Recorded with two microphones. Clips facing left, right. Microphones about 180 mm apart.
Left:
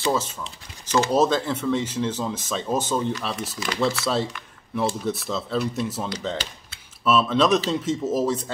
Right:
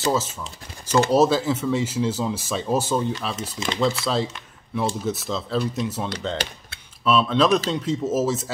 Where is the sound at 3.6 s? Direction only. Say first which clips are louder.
Right 3 dB; 25° right (ahead or behind).